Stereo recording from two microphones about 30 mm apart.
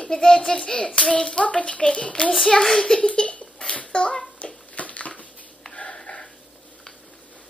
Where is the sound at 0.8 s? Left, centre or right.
Left.